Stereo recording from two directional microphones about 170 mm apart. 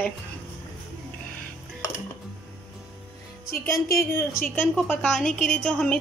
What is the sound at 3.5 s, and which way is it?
Speech, 60° left (ahead or behind).